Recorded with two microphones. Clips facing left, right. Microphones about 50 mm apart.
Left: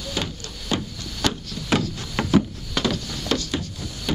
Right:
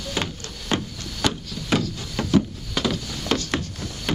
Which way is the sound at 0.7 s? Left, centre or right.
Centre.